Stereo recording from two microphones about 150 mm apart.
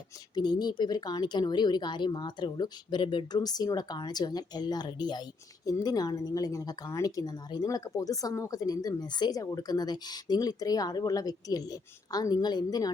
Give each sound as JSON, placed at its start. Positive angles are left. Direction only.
{"t": 0.3, "sound": "speech", "side_deg": 30}